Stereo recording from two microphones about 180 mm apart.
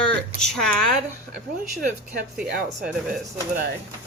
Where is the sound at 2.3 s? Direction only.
Centre (ahead or behind).